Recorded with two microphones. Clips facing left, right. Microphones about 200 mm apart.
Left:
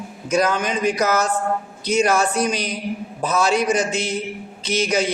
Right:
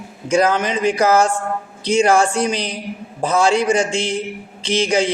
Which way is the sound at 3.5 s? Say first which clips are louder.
Right 3 dB; 25° right (ahead or behind).